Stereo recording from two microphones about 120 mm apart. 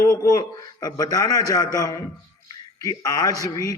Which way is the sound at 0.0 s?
25° left (ahead or behind).